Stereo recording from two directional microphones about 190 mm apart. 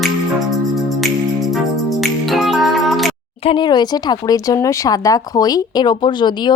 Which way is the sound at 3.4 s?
25° left (ahead or behind).